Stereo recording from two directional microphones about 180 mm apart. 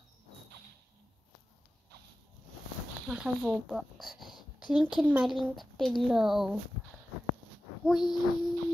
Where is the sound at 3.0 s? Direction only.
5° right (ahead or behind).